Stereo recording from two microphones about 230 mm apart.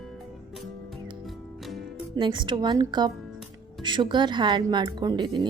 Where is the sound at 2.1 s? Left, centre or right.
Centre.